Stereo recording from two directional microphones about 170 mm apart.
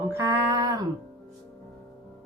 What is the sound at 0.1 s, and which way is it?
Female singing, 15° right (ahead or behind).